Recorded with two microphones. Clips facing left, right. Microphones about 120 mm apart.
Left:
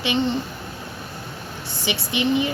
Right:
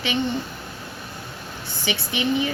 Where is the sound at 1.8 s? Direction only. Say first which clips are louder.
Left 2 dB; 20° left (ahead or behind).